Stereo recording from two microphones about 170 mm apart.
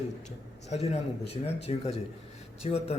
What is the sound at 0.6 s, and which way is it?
Speech, 40° left (ahead or behind).